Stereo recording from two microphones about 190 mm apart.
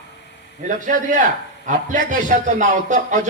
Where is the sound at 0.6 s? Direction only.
45° right (ahead or behind).